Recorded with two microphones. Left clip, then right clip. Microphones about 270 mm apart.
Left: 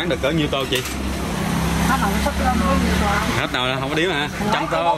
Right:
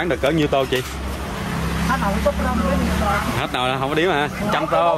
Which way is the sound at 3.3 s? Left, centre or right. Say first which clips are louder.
Even; centre.